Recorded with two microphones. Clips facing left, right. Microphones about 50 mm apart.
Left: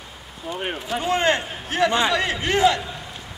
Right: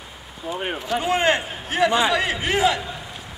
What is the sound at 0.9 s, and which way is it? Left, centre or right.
A man's voice, centre.